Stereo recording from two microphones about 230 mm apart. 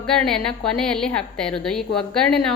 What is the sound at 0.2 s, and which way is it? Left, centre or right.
A woman's voice, centre.